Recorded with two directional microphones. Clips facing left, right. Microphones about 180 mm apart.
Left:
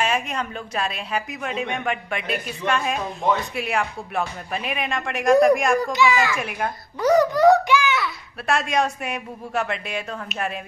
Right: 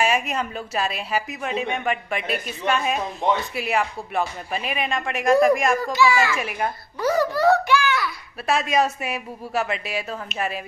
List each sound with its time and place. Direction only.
0.0 s a woman's voice: 5° right (ahead or behind)
3.2 s speech: 20° right (ahead or behind)
3.5 s a woman's voice: centre (ahead or behind)
5.9 s a child's voice: 20° left (ahead or behind)
6.3 s a woman's voice: centre (ahead or behind)
7.0 s a sound: 20° left (ahead or behind)
8.5 s a woman's voice: centre (ahead or behind)